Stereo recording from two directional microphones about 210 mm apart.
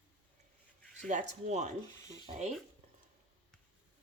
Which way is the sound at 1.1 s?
35° right (ahead or behind).